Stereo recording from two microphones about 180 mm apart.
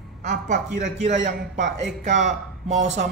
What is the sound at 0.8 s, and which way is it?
Speech, 40° right (ahead or behind).